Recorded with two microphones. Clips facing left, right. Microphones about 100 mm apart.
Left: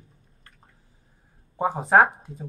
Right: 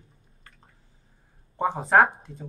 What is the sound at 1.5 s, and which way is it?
Speech, 5° left (ahead or behind).